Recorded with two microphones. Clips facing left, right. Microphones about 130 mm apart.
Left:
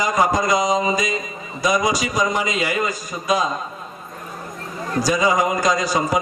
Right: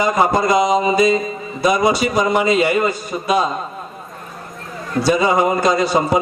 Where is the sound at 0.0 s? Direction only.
30° right (ahead or behind).